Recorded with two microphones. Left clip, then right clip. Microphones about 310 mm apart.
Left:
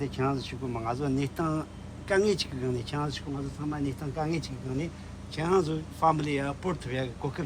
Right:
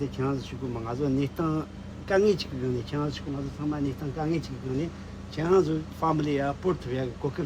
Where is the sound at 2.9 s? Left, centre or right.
Centre.